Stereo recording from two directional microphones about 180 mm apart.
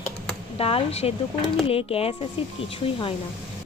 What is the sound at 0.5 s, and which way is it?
Speech, 35° left (ahead or behind).